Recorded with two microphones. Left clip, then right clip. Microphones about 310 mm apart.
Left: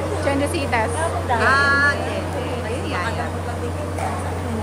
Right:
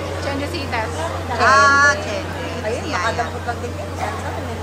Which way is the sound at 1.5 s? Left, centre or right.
Centre.